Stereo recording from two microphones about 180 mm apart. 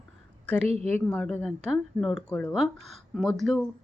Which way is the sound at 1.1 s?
5° left (ahead or behind).